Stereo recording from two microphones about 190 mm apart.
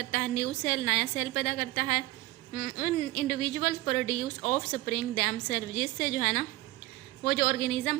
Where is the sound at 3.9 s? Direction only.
40° left (ahead or behind).